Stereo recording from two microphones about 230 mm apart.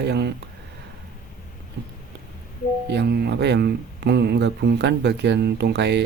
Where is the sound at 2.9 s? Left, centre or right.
Right.